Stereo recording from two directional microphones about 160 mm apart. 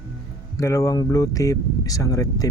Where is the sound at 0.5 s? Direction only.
20° left (ahead or behind).